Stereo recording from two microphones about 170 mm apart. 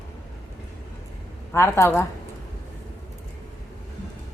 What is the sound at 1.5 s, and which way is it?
Speech, 15° left (ahead or behind).